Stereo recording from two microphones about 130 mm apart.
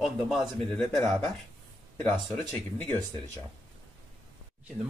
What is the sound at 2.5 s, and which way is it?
Speech, 15° left (ahead or behind).